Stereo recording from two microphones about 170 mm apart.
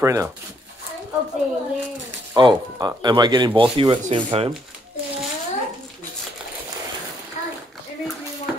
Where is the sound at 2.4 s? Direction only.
25° right (ahead or behind).